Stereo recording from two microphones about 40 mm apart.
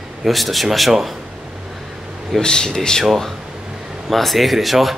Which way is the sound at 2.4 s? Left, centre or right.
Centre.